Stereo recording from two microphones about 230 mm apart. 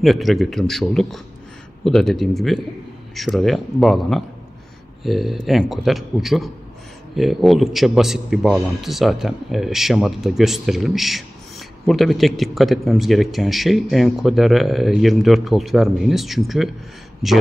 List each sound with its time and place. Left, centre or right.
0.0 s a man's voice: centre